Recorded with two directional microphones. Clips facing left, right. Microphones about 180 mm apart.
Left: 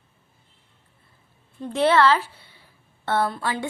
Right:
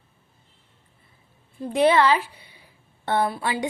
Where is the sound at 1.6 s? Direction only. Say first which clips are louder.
Even; 15° right (ahead or behind).